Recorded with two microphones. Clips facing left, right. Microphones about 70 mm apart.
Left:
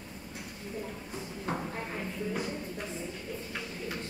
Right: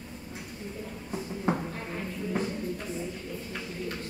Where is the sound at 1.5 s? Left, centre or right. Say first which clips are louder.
Even; centre.